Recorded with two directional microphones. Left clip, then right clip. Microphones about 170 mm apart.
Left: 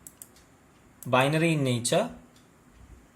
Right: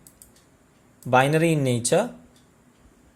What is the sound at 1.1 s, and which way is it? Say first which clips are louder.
Speech: right 5 dB; 45° right (ahead or behind).